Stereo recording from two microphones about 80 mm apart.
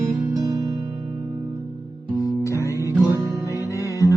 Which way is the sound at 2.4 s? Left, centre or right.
Left.